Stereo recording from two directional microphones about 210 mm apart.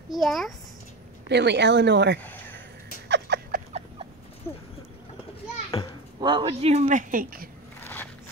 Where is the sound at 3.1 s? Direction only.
55° right (ahead or behind).